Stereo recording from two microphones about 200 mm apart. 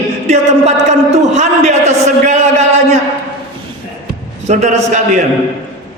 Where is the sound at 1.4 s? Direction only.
35° right (ahead or behind).